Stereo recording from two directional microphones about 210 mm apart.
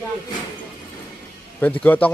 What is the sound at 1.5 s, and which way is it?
Speech, 5° left (ahead or behind).